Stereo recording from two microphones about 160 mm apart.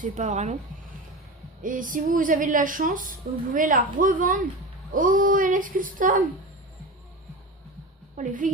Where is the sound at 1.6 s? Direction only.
55° right (ahead or behind).